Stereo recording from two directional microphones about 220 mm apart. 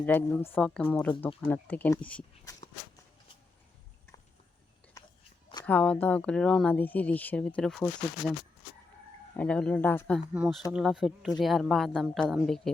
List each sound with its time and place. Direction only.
0.0 s speech: 10° left (ahead or behind)
5.0 s biting: 15° left (ahead or behind)
5.6 s speech: 5° left (ahead or behind)
9.3 s speech: 5° left (ahead or behind)
10.3 s speech: 5° right (ahead or behind)